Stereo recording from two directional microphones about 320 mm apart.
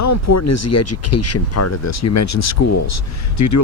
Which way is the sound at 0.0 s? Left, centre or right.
Left.